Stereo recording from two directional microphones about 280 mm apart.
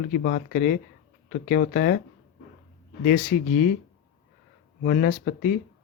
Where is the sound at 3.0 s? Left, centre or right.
Left.